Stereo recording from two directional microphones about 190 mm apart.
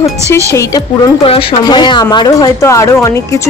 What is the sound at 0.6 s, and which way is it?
Speech, 20° left (ahead or behind).